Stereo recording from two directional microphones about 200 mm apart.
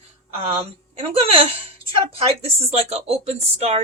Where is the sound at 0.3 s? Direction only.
30° right (ahead or behind).